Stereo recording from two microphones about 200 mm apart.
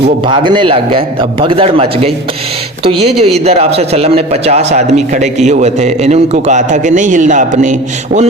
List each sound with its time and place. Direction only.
0.3 s a man's voice: 25° right (ahead or behind)
2.9 s speech: centre (ahead or behind)
3.4 s a man's voice: 30° right (ahead or behind)